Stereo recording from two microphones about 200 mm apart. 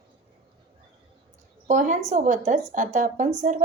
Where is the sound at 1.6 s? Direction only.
40° right (ahead or behind).